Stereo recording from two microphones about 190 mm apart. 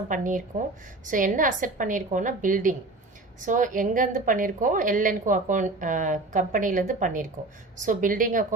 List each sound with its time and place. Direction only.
0.1 s a woman's voice: 45° right (ahead or behind)